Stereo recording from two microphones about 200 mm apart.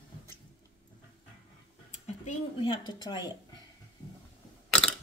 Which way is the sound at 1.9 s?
35° left (ahead or behind).